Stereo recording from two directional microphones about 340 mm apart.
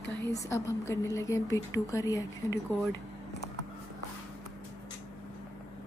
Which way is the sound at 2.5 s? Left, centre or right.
Left.